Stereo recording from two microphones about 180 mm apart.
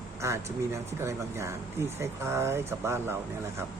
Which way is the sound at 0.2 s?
15° right (ahead or behind).